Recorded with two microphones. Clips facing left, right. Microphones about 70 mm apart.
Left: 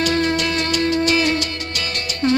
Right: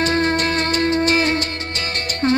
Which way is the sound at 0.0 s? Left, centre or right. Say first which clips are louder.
Right 1 dB; right.